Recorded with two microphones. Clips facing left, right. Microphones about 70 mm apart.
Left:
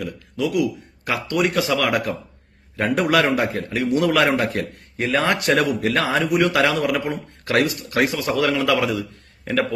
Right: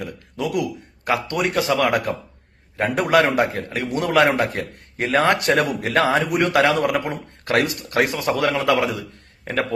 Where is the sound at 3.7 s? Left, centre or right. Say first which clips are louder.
Left 3 dB; right.